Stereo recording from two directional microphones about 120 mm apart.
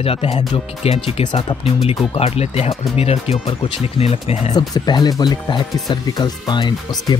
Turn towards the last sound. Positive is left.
turn(degrees=40)  # may be behind; listen again after turning